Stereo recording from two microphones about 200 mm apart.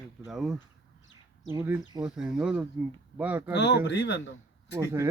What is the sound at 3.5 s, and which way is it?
Speech, 60° left (ahead or behind).